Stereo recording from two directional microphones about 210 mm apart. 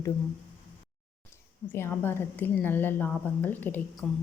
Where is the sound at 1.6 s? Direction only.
10° left (ahead or behind).